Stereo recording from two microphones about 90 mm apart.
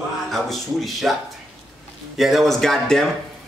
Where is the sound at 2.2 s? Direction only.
Centre (ahead or behind).